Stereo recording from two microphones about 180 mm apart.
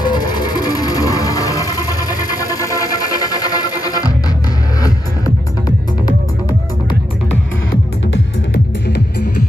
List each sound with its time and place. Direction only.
0.0 s music: 20° left (ahead or behind)